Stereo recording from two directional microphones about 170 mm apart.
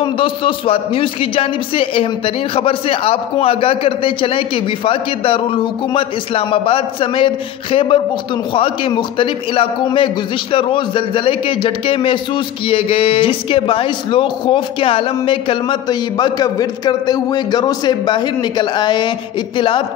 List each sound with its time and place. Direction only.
0.0 s a man's voice: 30° left (ahead or behind)